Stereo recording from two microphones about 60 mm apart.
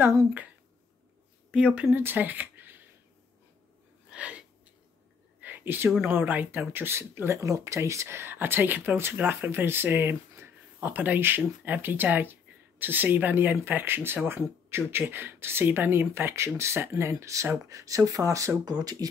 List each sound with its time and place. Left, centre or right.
1.5 s speech: centre
1.9 s speech: right
4.1 s sneeze: right
5.4 s a sound: right
6.0 s speech: right
17.6 s speech: right